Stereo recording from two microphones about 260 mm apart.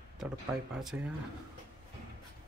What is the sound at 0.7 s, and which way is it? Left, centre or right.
Speech, centre.